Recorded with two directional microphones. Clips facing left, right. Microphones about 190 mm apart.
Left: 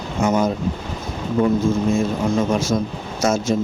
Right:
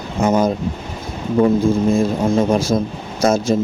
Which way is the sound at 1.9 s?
35° right (ahead or behind).